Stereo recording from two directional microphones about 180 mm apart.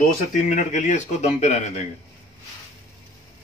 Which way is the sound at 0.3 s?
45° left (ahead or behind).